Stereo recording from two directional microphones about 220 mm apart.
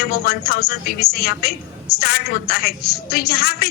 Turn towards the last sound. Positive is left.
turn(degrees=45)  # may be behind; listen again after turning